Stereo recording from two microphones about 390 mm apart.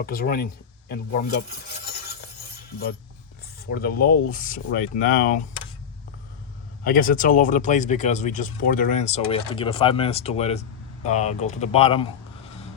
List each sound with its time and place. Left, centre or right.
0.0 s speech: left
3.7 s speech: left
6.8 s speech: left